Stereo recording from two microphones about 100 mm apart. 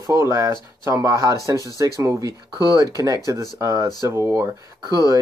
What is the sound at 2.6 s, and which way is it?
Speech, 50° right (ahead or behind).